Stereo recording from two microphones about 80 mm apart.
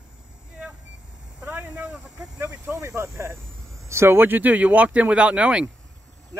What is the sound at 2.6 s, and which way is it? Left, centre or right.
Speech, right.